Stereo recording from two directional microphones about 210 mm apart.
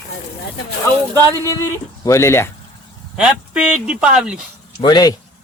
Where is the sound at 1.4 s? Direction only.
15° left (ahead or behind).